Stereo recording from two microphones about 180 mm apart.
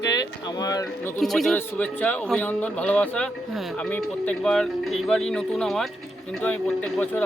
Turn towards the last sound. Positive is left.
turn(degrees=5)  # may be behind; listen again after turning